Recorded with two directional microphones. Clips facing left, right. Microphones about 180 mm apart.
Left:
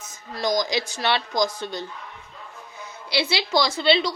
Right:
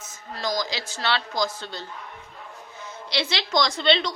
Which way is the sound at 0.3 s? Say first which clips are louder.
Left 5 dB; 15° left (ahead or behind).